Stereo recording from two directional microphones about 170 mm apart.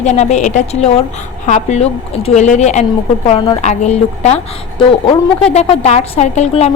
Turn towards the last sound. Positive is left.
turn(degrees=40)  # may be behind; listen again after turning